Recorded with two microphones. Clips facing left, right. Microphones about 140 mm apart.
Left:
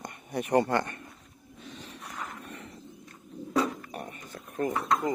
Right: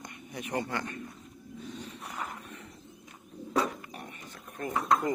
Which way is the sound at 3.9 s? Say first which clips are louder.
Left 5 dB; 45° left (ahead or behind).